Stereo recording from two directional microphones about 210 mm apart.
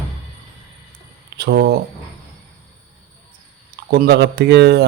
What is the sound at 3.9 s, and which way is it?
Speech, 50° right (ahead or behind).